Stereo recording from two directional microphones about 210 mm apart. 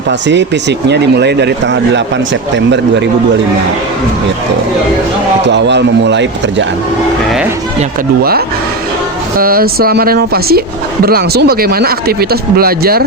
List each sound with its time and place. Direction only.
0.1 s speech: 55° right (ahead or behind)
5.5 s speech: 55° right (ahead or behind)
9.4 s speech: 45° right (ahead or behind)